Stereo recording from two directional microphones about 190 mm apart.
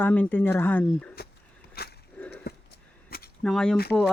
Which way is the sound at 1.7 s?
55° left (ahead or behind).